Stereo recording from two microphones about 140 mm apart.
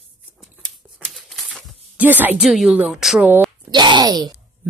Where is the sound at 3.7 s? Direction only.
30° right (ahead or behind).